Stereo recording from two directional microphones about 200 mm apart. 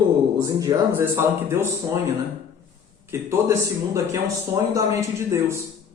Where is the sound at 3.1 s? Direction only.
10° right (ahead or behind).